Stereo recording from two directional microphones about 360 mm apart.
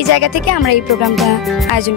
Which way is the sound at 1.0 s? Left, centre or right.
Centre.